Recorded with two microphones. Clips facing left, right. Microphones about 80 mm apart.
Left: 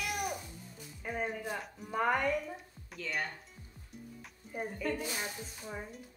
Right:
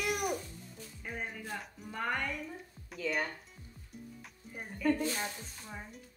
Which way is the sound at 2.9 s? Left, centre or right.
Centre.